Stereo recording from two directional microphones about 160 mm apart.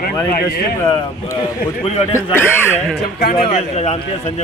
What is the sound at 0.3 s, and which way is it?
Speech, 75° left (ahead or behind).